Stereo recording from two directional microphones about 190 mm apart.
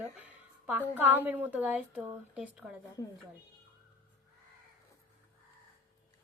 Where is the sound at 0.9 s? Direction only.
10° right (ahead or behind).